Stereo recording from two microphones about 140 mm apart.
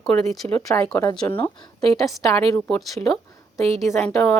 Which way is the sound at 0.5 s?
20° left (ahead or behind).